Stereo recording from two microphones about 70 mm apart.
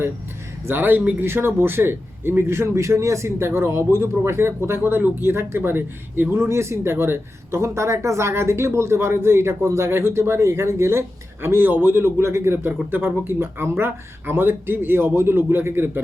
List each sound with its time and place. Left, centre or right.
0.7 s a man's voice: right
7.6 s a man's voice: right